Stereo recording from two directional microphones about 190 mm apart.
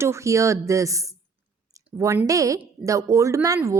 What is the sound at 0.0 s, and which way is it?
A woman's voice, 15° right (ahead or behind).